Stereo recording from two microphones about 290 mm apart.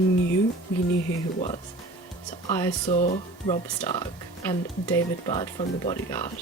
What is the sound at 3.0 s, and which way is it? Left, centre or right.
Speech, left.